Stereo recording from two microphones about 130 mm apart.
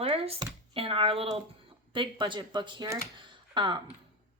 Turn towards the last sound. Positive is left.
turn(degrees=-35)  # may be behind; listen again after turning